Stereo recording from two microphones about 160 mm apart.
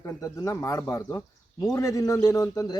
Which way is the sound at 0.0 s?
20° left (ahead or behind).